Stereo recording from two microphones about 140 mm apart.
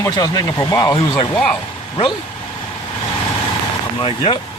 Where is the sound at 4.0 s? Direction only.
45° left (ahead or behind).